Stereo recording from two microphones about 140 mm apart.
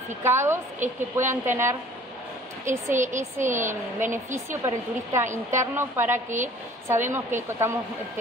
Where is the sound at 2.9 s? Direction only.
60° right (ahead or behind).